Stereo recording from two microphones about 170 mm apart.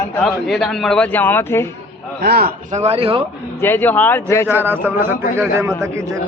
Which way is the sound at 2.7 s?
35° right (ahead or behind).